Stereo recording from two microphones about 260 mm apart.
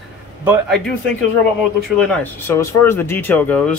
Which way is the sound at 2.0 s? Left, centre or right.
Centre.